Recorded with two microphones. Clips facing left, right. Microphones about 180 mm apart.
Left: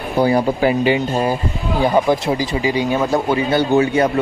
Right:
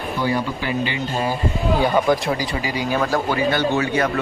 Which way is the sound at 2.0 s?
25° left (ahead or behind).